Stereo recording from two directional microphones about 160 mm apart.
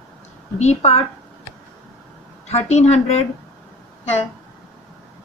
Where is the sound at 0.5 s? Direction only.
40° left (ahead or behind).